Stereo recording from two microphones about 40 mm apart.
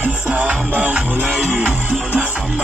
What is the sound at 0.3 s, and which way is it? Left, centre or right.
Music, right.